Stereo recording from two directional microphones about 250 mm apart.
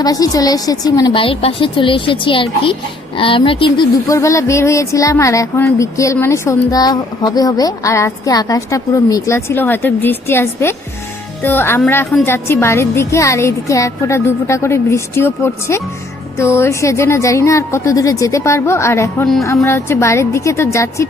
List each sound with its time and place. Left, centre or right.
0.0 s a woman's voice: centre